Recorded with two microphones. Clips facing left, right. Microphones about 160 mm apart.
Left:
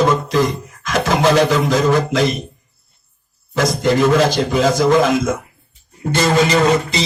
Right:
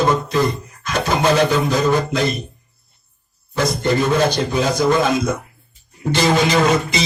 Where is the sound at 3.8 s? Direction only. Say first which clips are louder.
Left 3 dB; 90° left.